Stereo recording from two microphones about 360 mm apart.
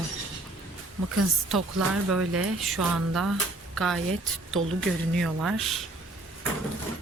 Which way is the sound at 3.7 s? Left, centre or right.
Centre.